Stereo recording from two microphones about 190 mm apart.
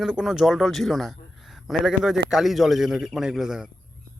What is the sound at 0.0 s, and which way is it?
A man's voice, centre (ahead or behind).